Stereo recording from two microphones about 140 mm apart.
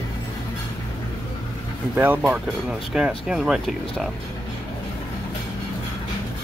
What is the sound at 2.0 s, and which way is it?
Speech, 15° right (ahead or behind).